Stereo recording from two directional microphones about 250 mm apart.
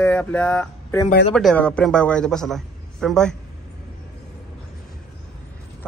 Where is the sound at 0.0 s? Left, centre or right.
Centre.